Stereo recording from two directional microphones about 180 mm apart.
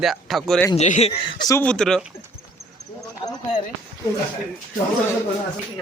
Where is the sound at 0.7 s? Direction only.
40° left (ahead or behind).